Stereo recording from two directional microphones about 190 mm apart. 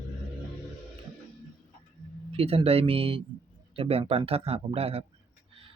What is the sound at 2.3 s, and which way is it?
Speech, 30° right (ahead or behind).